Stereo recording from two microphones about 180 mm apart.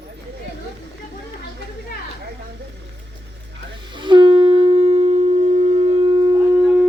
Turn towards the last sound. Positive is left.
turn(degrees=-5)  # may be behind; listen again after turning